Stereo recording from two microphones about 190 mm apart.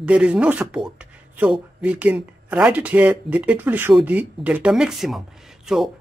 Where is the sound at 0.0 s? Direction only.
5° right (ahead or behind).